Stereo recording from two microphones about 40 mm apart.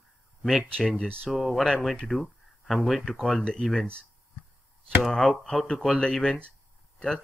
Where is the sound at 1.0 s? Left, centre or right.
Centre.